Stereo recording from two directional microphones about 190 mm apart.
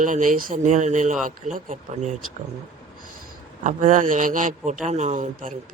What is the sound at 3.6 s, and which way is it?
A man's voice, 40° right (ahead or behind).